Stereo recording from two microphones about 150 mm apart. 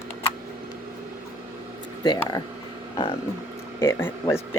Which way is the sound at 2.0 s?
25° left (ahead or behind).